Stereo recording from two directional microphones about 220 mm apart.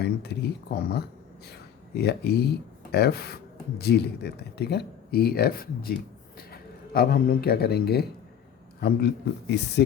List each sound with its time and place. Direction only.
0.0 s speech: 50° left (ahead or behind)